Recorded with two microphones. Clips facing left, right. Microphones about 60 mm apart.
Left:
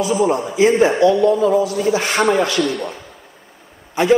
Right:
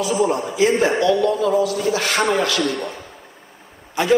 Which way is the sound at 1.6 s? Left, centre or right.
Right.